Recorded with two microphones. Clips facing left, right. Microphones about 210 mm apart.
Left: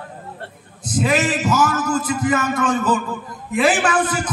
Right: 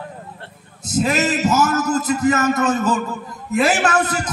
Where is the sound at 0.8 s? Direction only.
40° right (ahead or behind).